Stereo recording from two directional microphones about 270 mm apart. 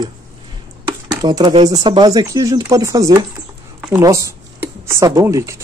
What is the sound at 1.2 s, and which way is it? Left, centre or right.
Speech, centre.